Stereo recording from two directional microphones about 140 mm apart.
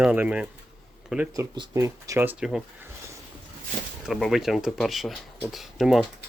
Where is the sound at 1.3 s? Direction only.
30° right (ahead or behind); by 2.6 s 5° right (ahead or behind).